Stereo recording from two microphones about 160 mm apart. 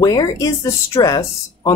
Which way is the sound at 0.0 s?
20° left (ahead or behind).